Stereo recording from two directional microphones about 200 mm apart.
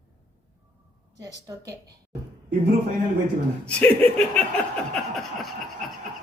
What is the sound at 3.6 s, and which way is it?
Laughter, 5° left (ahead or behind).